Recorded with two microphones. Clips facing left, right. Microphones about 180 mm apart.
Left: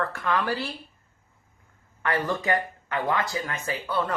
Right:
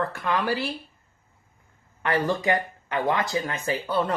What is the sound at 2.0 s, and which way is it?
Speech, 20° right (ahead or behind).